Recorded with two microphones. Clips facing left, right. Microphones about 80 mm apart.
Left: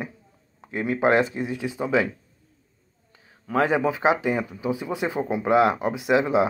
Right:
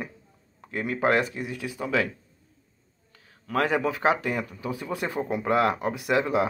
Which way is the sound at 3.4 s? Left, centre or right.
Left.